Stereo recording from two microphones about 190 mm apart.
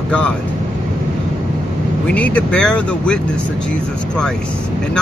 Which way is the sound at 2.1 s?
5° left (ahead or behind).